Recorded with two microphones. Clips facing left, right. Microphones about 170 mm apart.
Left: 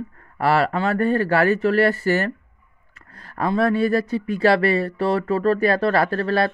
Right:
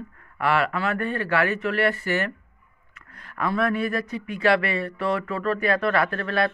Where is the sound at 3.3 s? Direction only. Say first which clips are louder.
Left 4 dB; 30° left (ahead or behind).